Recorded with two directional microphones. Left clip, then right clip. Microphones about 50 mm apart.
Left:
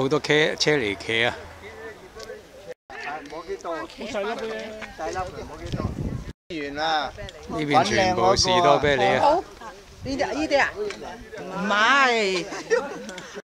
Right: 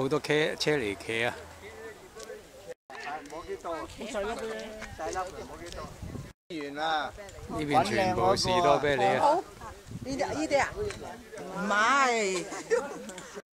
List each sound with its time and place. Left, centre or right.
0.0 s speech: centre
3.3 s a sound: centre
3.7 s speech: left
4.1 s speech: centre
5.0 s speech: right
6.5 s speech: left
7.5 s speech: centre
10.0 s speech: left
12.4 s speech: centre